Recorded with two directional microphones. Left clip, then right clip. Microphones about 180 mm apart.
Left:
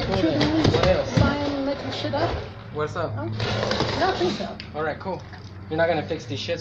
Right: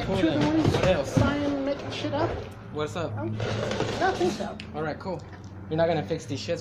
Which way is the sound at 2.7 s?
45° right (ahead or behind).